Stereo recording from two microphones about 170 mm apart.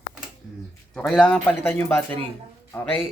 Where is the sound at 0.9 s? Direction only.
5° left (ahead or behind).